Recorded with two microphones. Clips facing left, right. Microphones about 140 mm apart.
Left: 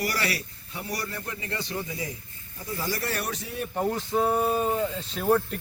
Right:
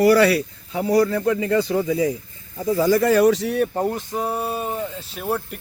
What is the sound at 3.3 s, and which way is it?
Speech, 85° right.